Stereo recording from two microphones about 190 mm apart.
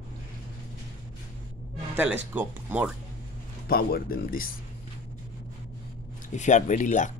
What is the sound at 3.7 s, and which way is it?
Speech, 50° left (ahead or behind).